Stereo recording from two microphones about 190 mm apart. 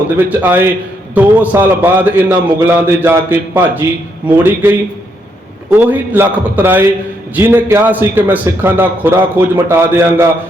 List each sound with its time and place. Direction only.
0.2 s a man's voice: 10° right (ahead or behind)